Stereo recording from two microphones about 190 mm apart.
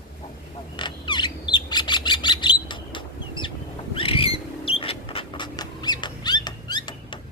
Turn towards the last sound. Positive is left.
turn(degrees=25)  # may be behind; listen again after turning